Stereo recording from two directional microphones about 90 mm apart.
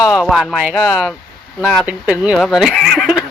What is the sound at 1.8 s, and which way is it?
Speech, 15° right (ahead or behind).